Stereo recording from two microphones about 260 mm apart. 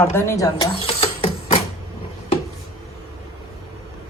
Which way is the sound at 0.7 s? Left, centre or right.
Left.